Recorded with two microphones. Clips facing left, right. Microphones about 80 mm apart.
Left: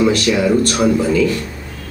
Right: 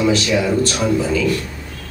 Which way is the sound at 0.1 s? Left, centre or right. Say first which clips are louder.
Left 2 dB; left.